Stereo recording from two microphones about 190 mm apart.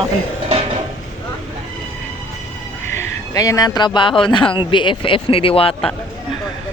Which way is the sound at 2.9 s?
15° left (ahead or behind).